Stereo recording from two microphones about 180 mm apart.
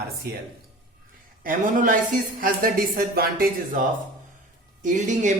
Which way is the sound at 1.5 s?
50° right (ahead or behind).